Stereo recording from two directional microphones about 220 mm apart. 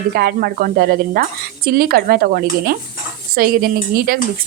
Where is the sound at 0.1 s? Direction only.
45° right (ahead or behind).